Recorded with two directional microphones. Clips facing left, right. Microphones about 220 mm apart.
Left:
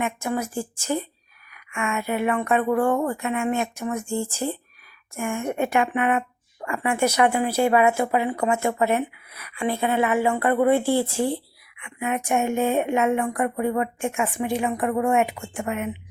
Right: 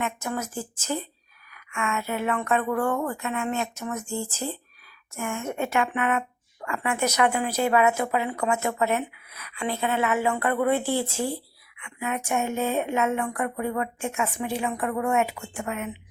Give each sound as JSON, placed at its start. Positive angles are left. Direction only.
{"t": 0.0, "sound": "a woman's voice", "side_deg": 10}
{"t": 9.3, "sound": "a woman's voice", "side_deg": 10}